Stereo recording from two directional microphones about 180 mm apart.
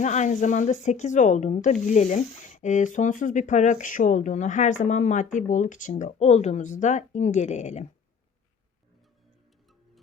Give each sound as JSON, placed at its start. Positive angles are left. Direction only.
{"t": 0.0, "sound": "a woman's voice", "side_deg": 40}